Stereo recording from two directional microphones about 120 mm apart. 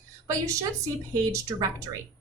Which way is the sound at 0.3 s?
25° right (ahead or behind).